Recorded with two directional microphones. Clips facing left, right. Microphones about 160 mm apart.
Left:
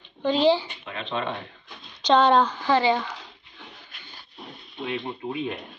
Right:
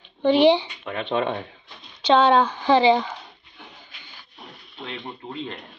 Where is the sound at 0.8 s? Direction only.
55° right (ahead or behind).